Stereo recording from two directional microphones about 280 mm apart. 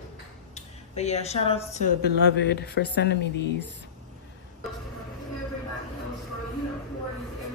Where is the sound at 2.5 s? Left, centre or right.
Left.